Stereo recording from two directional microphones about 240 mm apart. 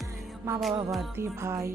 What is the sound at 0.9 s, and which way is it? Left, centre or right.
Music, centre.